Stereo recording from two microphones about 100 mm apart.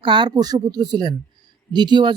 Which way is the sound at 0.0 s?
55° right (ahead or behind).